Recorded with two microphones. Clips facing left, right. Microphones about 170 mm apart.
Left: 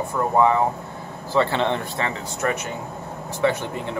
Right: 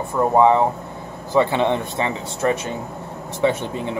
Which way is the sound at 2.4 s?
25° right (ahead or behind).